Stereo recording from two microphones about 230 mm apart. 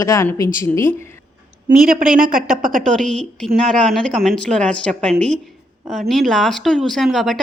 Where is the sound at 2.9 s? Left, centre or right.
Centre.